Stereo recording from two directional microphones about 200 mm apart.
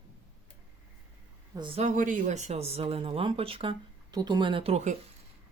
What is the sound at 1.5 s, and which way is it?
Speech, 25° right (ahead or behind).